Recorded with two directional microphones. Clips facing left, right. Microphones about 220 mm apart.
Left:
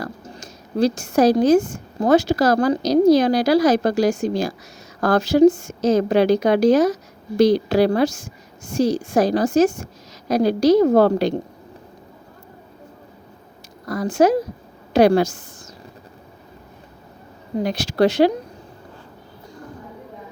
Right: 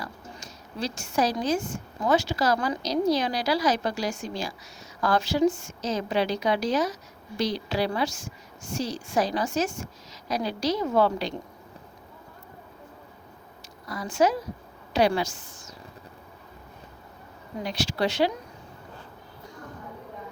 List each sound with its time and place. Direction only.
0.0 s a woman's voice: 40° left (ahead or behind)
5.8 s a woman's voice: 50° left (ahead or behind)
13.8 s speech: 45° left (ahead or behind)
17.6 s speech: 50° left (ahead or behind)